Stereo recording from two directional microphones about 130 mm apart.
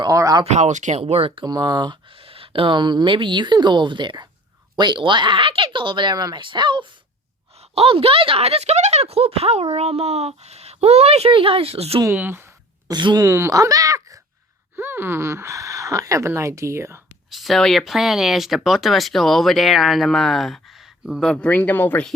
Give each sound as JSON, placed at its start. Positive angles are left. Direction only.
{"t": 0.0, "sound": "a sound", "side_deg": -30}
{"t": 0.4, "sound": "speech", "side_deg": -65}
{"t": 1.5, "sound": "speech", "side_deg": -35}
{"t": 7.6, "sound": "speech", "side_deg": -50}
{"t": 12.0, "sound": "speech", "side_deg": -15}
{"t": 12.9, "sound": "speech", "side_deg": -35}
{"t": 13.2, "sound": "speech", "side_deg": -20}
{"t": 17.3, "sound": "speech", "side_deg": 0}